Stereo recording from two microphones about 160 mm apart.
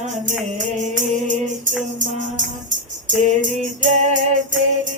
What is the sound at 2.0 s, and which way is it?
Music, 55° right (ahead or behind).